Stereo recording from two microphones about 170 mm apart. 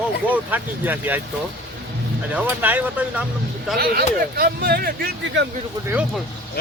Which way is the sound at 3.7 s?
60° right (ahead or behind).